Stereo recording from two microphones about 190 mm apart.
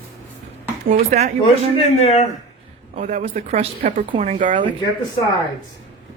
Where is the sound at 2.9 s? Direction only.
40° right (ahead or behind).